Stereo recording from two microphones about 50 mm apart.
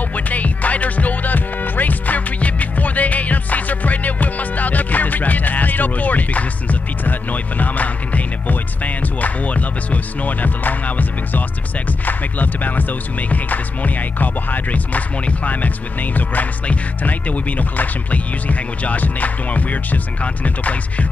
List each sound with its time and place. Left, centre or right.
0.1 s music: left